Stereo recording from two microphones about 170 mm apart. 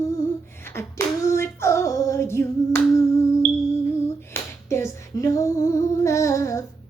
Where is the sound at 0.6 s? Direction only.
15° left (ahead or behind).